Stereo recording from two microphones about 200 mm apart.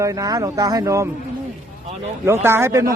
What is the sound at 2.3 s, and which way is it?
Speech, 15° right (ahead or behind).